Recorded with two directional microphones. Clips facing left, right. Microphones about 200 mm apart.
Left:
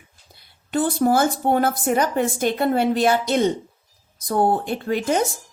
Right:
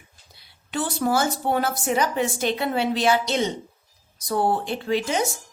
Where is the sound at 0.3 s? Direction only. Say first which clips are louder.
Left 6 dB; 50° left (ahead or behind).